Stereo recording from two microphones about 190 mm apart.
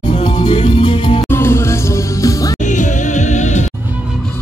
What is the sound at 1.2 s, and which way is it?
Music, 15° left (ahead or behind).